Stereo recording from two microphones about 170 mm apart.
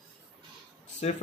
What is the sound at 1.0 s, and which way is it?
Speech, 40° left (ahead or behind).